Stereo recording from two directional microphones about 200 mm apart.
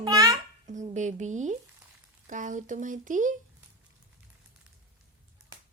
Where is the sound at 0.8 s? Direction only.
35° right (ahead or behind).